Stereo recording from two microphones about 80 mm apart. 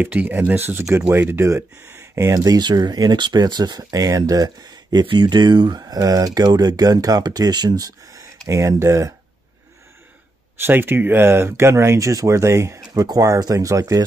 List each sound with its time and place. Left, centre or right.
0.0 s speech: right
10.6 s speech: right
12.9 s speech: right